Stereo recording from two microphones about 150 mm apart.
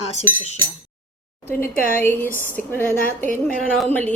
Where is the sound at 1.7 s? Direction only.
70° left (ahead or behind).